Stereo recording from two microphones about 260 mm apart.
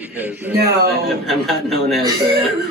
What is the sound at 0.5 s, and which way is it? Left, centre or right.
Speech, right.